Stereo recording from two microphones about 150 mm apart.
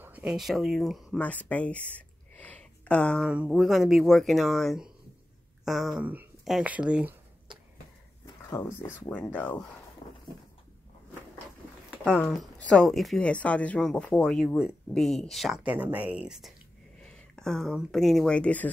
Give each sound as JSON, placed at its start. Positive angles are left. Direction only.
{"t": 0.0, "sound": "speech", "side_deg": -10}
{"t": 3.3, "sound": "speech", "side_deg": -5}
{"t": 8.5, "sound": "speech", "side_deg": 15}
{"t": 10.0, "sound": "a sound", "side_deg": 45}
{"t": 12.0, "sound": "speech", "side_deg": 5}